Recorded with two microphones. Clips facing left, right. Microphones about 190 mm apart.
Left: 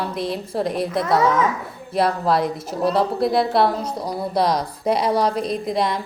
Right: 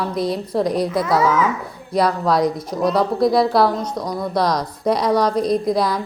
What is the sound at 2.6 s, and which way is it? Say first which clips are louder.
A woman's voice: right 1 dB; 30° left (ahead or behind).